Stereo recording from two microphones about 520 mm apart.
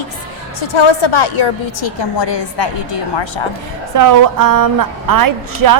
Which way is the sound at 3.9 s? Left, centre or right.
Right.